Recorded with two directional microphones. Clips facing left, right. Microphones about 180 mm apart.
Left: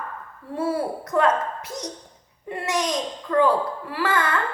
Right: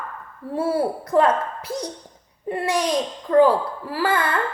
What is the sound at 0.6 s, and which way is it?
A woman's voice, 30° right (ahead or behind).